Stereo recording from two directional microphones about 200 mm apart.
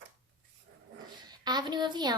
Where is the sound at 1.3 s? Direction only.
20° right (ahead or behind).